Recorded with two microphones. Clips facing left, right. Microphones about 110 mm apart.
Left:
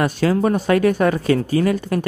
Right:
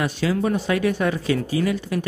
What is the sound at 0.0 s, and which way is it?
Speech, 50° left (ahead or behind).